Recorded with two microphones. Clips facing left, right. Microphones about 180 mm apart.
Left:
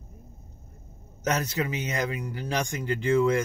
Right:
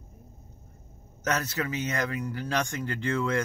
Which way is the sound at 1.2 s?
15° left (ahead or behind).